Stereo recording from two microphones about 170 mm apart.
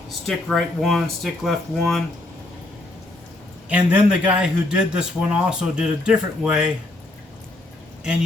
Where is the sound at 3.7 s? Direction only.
10° right (ahead or behind).